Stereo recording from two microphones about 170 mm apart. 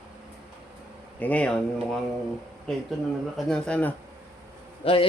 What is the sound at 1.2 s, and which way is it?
Speech, 10° left (ahead or behind).